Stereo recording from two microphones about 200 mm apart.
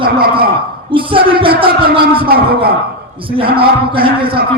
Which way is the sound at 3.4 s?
50° right (ahead or behind).